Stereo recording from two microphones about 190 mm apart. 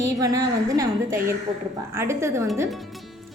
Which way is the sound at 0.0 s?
15° right (ahead or behind).